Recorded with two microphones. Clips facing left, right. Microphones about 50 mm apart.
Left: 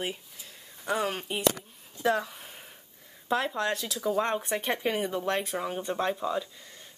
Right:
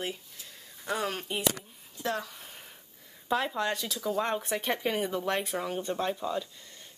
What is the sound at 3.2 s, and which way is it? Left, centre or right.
Speech, centre.